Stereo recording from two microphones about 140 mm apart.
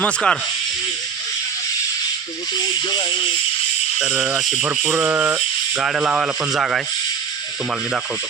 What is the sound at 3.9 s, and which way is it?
Speech, 5° right (ahead or behind).